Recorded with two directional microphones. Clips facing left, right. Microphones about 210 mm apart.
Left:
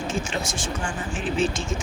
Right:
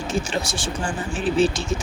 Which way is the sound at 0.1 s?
35° right (ahead or behind).